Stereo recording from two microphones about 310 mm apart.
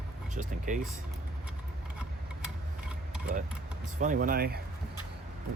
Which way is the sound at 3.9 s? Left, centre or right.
Right.